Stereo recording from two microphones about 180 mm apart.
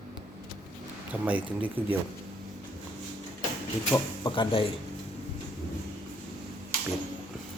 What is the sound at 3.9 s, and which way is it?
Speech, 25° left (ahead or behind).